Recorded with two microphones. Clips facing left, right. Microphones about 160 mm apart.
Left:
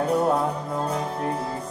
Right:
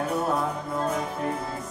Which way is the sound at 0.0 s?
35° left (ahead or behind).